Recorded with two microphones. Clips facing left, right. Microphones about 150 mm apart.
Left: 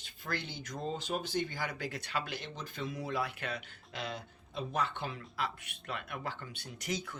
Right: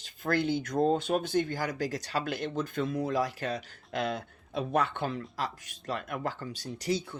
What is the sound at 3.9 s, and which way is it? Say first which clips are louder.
Speech: right 9 dB; 55° right (ahead or behind).